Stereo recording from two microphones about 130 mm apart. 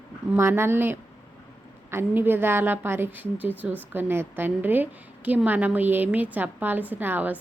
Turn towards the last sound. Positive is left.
turn(degrees=-15)  # may be behind; listen again after turning